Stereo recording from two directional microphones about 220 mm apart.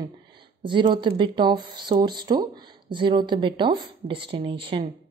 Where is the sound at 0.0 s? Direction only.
20° right (ahead or behind).